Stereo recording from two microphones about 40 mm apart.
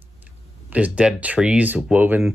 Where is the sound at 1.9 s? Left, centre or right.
Centre.